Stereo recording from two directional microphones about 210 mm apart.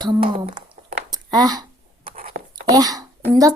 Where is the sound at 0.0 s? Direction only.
25° right (ahead or behind).